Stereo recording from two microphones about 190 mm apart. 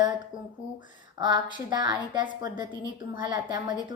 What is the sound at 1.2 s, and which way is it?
A woman's voice, 20° right (ahead or behind).